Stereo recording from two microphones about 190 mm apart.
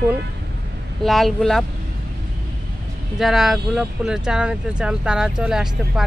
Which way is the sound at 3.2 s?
Centre (ahead or behind).